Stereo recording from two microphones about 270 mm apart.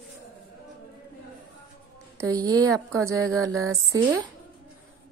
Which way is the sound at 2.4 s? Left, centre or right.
Centre.